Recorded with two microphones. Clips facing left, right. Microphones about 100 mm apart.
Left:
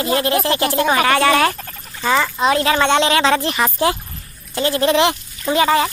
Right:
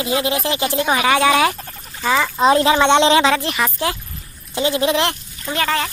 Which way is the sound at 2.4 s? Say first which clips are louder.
Right 5 dB; 25° right (ahead or behind).